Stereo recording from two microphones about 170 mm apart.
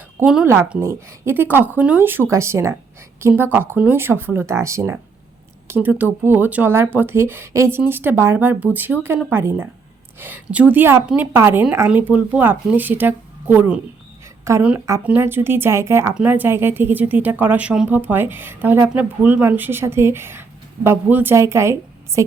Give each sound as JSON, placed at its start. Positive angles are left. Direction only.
{"t": 0.2, "sound": "speech", "side_deg": -10}